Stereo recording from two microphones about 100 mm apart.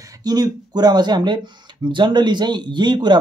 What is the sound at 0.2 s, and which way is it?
Speech, 40° right (ahead or behind).